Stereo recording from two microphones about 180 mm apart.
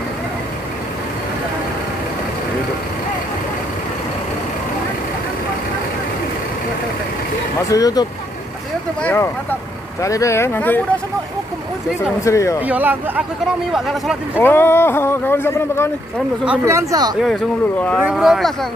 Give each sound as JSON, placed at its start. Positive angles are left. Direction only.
{"t": 7.6, "sound": "speech", "side_deg": 20}
{"t": 12.3, "sound": "speech", "side_deg": 15}
{"t": 12.6, "sound": "speech", "side_deg": -10}
{"t": 14.4, "sound": "speech", "side_deg": 10}
{"t": 16.4, "sound": "speech", "side_deg": -15}
{"t": 18.0, "sound": "speech", "side_deg": 0}